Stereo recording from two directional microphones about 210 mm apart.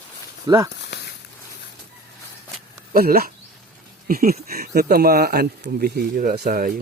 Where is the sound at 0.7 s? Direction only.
55° left (ahead or behind).